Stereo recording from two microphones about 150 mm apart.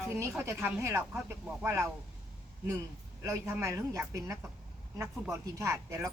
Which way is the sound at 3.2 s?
20° right (ahead or behind).